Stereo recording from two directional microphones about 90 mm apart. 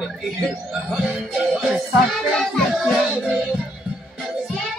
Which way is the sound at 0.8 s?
Centre (ahead or behind).